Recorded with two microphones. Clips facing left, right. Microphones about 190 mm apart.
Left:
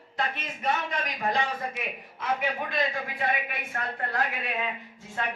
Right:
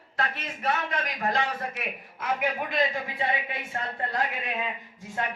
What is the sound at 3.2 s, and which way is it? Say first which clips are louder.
A woman's voice: even; 25° right (ahead or behind).